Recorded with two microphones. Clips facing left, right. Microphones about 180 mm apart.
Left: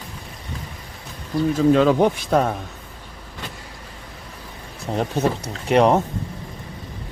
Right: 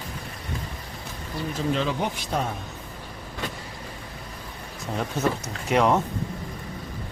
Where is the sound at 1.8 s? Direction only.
55° left (ahead or behind).